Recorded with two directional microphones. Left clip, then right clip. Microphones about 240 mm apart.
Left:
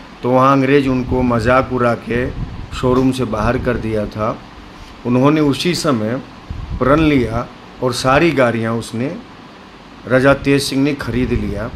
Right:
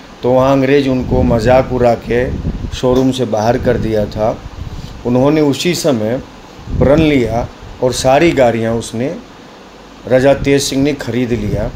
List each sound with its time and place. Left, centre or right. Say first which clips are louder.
0.2 s speech: right 2 dB; centre